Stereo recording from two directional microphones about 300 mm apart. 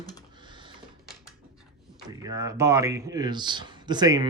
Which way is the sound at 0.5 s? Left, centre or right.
Centre.